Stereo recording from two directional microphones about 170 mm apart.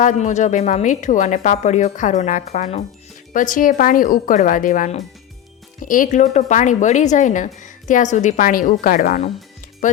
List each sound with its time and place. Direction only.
0.0 s speech: 45° left (ahead or behind)
3.3 s speech: 50° left (ahead or behind)